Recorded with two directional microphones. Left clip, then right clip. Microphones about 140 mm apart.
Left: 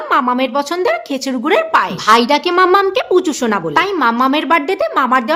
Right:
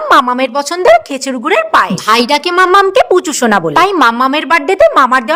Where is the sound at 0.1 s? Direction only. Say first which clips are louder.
Right 5 dB; 50° right (ahead or behind); by 2.0 s 35° right (ahead or behind).